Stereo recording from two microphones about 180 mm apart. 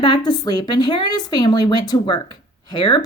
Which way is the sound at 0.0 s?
25° left (ahead or behind).